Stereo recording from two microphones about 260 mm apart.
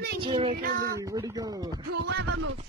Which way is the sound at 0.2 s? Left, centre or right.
Right.